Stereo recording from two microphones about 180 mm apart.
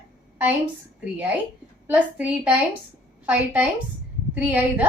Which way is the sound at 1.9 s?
5° right (ahead or behind).